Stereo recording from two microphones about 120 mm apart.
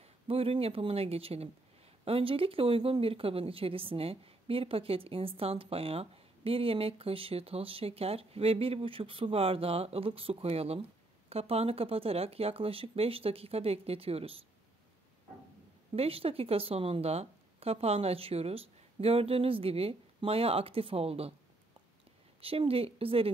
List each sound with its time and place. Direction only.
0.0 s speech: 55° right (ahead or behind)
15.9 s speech: 50° right (ahead or behind)
22.4 s speech: 50° right (ahead or behind)